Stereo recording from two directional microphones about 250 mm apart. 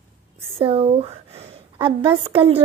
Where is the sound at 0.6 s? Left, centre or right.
Right.